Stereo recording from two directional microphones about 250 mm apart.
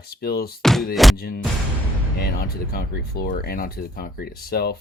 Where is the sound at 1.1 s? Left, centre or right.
Left.